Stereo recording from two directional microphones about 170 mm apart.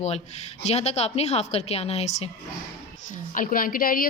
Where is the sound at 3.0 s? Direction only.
50° left (ahead or behind).